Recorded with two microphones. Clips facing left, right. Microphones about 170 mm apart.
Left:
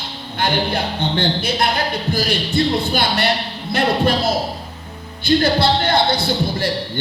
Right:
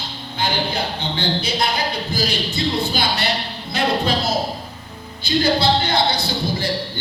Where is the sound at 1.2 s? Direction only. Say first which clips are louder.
Left 1 dB; 55° left (ahead or behind).